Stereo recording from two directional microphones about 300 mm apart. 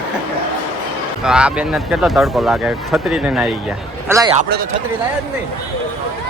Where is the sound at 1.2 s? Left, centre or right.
Centre.